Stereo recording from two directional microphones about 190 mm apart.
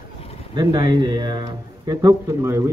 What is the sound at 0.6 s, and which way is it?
A man's voice, 25° right (ahead or behind).